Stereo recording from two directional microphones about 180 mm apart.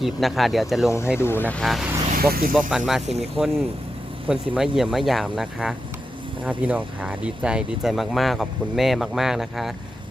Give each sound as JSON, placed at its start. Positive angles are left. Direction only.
{"t": 0.0, "sound": "speech", "side_deg": 0}
{"t": 0.9, "sound": "speech", "side_deg": 15}
{"t": 2.3, "sound": "speech", "side_deg": -55}
{"t": 2.6, "sound": "speech", "side_deg": 0}